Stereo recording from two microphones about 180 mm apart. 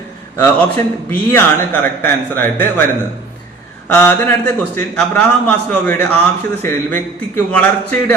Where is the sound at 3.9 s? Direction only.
10° left (ahead or behind).